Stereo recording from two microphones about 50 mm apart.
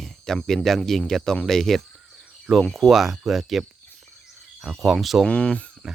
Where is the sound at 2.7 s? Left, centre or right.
Centre.